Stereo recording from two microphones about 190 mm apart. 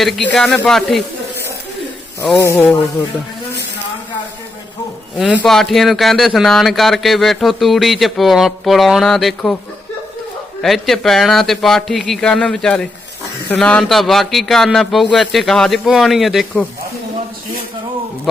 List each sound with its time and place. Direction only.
0.3 s speech: 5° left (ahead or behind)
2.4 s speech: 10° left (ahead or behind)
5.1 s speech: 5° right (ahead or behind)
10.6 s speech: centre (ahead or behind)